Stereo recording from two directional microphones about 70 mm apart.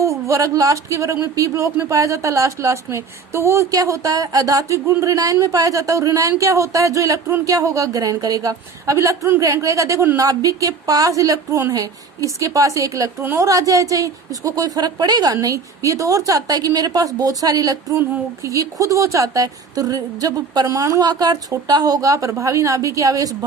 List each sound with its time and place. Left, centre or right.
0.0 s a woman's voice: right
20.7 s speech: right
21.0 s speech: right